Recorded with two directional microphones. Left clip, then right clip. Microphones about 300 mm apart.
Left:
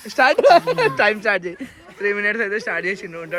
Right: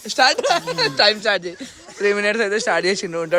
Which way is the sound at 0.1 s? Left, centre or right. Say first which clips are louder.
Left 4 dB; centre.